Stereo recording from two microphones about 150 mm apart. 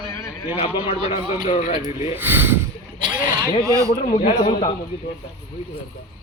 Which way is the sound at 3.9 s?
60° left (ahead or behind).